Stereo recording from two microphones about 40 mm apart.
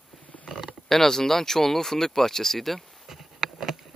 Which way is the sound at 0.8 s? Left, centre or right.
Centre.